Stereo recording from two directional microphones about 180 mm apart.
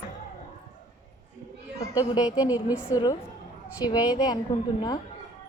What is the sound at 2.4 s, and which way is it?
Speech, 10° right (ahead or behind).